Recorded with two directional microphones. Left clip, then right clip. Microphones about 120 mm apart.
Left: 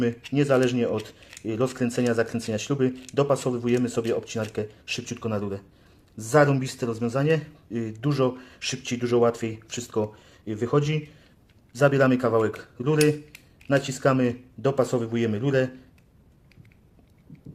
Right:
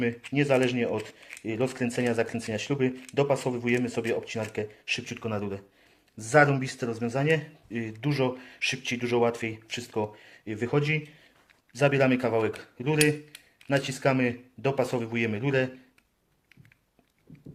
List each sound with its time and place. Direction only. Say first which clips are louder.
0.0 s speech: left 3 dB; 30° left (ahead or behind)
14.7 s a man's voice: left 4 dB; centre (ahead or behind)
15.4 s speech: left 3 dB; 30° left (ahead or behind)